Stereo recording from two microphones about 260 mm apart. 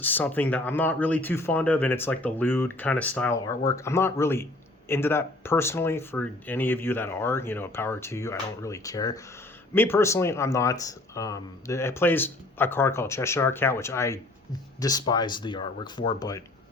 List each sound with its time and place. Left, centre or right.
0.0 s speech: centre